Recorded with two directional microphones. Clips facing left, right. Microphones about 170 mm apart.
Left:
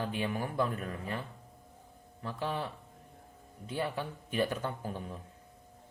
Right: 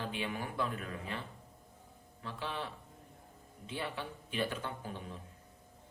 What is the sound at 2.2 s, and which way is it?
Speech, 45° left (ahead or behind).